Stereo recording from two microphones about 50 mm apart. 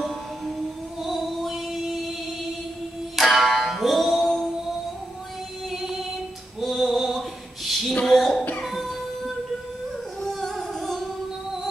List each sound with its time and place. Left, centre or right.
0.0 s music: centre
3.2 s music: centre
5.7 s music: centre
6.6 s a sound: centre
8.6 s music: centre
10.2 s music: centre